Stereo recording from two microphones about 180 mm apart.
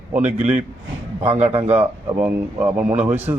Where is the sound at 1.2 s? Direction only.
35° right (ahead or behind).